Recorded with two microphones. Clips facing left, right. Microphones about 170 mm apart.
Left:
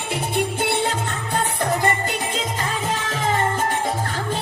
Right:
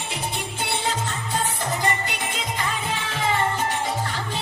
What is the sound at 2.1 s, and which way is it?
Music, 40° left (ahead or behind).